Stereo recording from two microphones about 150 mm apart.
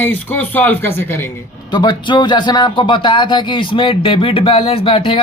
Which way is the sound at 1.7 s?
30° left (ahead or behind).